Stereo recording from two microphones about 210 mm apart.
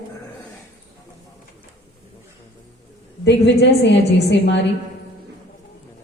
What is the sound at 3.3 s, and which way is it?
A woman's voice, 55° left (ahead or behind).